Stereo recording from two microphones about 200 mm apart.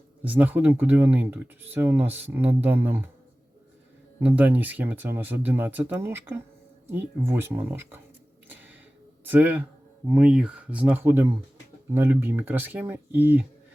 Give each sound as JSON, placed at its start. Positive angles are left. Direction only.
{"t": 0.2, "sound": "speech", "side_deg": -10}
{"t": 4.2, "sound": "speech", "side_deg": -10}
{"t": 9.2, "sound": "speech", "side_deg": -10}